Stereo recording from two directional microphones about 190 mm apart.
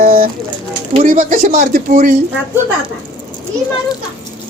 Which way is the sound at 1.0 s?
45° right (ahead or behind).